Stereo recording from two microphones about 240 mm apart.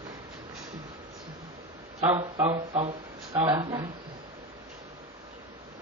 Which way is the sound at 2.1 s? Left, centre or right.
Right.